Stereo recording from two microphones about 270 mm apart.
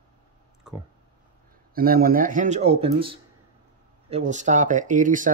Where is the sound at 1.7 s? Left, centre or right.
Right.